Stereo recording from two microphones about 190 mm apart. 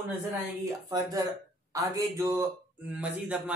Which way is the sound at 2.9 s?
5° right (ahead or behind).